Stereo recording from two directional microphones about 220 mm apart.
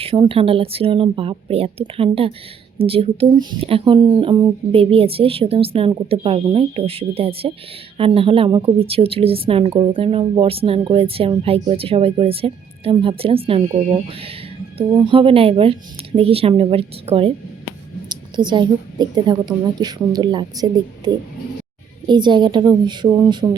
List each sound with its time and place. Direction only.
0.0 s speech: 25° right (ahead or behind)